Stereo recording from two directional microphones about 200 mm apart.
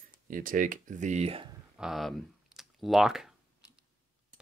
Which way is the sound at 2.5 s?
Centre (ahead or behind).